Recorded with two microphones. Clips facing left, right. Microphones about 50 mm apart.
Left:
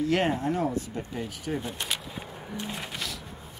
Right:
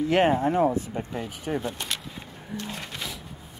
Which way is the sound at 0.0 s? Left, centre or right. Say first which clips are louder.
Right 4 dB; right.